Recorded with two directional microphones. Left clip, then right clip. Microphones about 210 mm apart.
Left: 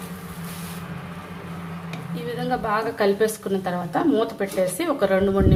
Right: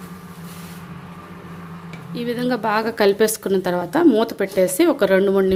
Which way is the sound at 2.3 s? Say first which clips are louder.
Right 3 dB; 45° right (ahead or behind).